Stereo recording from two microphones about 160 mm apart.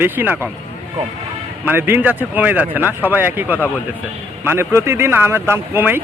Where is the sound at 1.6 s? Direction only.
15° right (ahead or behind).